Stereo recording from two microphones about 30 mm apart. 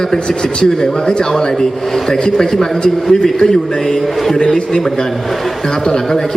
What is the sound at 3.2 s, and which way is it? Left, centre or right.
A man's voice, left.